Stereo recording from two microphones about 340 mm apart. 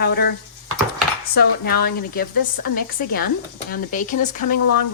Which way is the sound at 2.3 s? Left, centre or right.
Left.